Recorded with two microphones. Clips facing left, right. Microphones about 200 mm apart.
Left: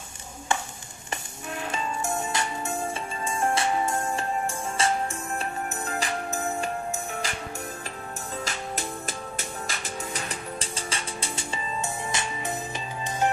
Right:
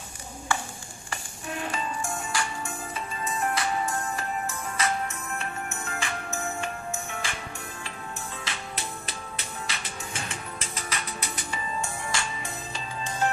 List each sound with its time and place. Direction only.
0.5 s stir: 20° left (ahead or behind)
1.7 s music: 25° left (ahead or behind); by 7.3 s 40° left (ahead or behind)
8.5 s music: 45° left (ahead or behind); by 12.5 s 20° left (ahead or behind)